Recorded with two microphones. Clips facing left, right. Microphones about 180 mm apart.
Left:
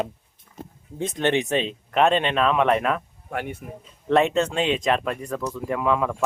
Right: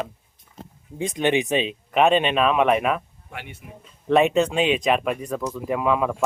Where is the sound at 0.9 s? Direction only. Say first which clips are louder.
Right 1 dB; 15° right (ahead or behind).